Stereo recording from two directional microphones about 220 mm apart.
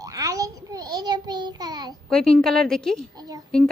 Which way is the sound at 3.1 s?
20° right (ahead or behind).